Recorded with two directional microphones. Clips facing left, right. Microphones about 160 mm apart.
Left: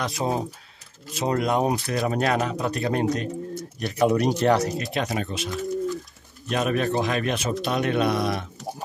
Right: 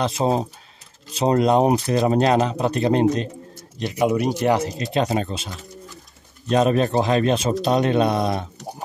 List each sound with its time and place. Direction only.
0.0 s speech: 30° right (ahead or behind)
3.8 s speech: 15° right (ahead or behind); by 5.5 s 30° right (ahead or behind)
6.5 s a man's voice: 30° right (ahead or behind)